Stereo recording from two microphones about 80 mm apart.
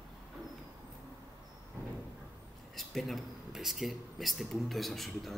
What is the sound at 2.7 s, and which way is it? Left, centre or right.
Speech, centre.